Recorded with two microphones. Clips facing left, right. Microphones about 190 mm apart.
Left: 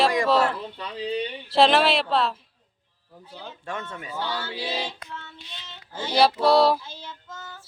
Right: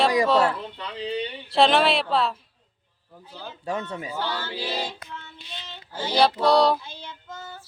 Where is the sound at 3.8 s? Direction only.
20° right (ahead or behind).